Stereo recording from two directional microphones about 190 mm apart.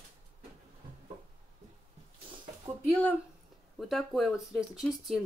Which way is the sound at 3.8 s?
Centre (ahead or behind).